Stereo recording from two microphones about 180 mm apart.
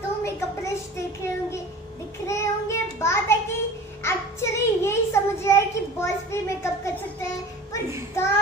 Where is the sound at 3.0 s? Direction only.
15° left (ahead or behind).